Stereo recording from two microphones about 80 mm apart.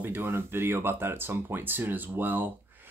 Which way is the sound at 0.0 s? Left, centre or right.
Right.